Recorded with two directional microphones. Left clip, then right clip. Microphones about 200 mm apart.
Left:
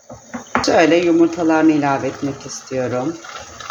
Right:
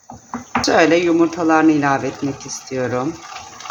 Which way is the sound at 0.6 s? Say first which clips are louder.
Even; 10° right (ahead or behind).